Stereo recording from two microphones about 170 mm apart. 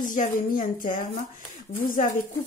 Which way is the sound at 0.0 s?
50° left (ahead or behind).